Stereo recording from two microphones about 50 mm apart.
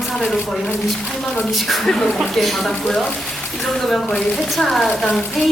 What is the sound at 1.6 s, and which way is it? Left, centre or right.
A woman's voice, centre.